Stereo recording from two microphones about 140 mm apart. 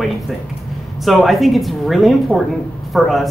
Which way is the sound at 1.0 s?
Centre (ahead or behind).